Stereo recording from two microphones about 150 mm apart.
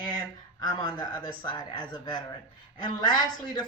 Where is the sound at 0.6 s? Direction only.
30° left (ahead or behind).